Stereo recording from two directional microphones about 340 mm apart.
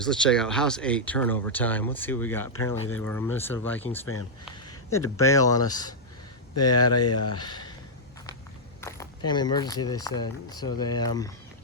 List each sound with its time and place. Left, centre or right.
0.0 s speech: centre
4.6 s a sound: centre
5.1 s speech: centre
6.9 s speech: left
7.3 s speech: centre
8.8 s speech: centre